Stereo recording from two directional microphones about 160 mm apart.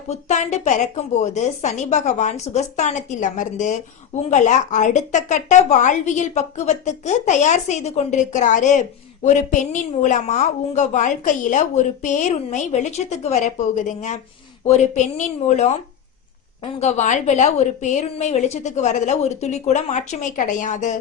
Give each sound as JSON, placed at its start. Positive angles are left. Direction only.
{"t": 0.1, "sound": "a woman's voice", "side_deg": 45}
{"t": 16.8, "sound": "a woman's voice", "side_deg": 50}